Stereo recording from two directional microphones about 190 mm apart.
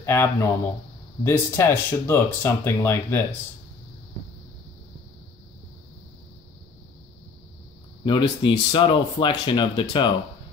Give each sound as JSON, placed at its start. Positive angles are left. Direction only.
{"t": 0.0, "sound": "speech", "side_deg": 15}
{"t": 8.0, "sound": "speech", "side_deg": 25}